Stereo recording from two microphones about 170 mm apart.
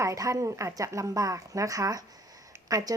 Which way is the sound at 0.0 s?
20° right (ahead or behind).